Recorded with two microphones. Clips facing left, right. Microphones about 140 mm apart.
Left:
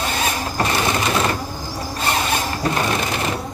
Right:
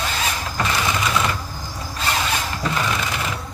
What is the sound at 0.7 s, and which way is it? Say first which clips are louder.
Bird: left 1 dB; 35° left (ahead or behind).